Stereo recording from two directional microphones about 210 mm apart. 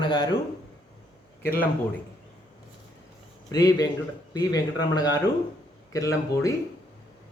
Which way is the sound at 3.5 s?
20° left (ahead or behind).